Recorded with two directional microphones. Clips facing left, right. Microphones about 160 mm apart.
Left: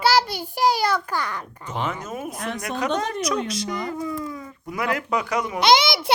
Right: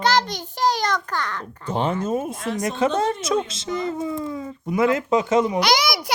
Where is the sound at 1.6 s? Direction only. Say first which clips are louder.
Right 6 dB; 30° right (ahead or behind).